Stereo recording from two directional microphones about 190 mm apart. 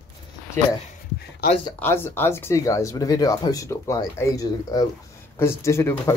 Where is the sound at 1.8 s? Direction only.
10° left (ahead or behind).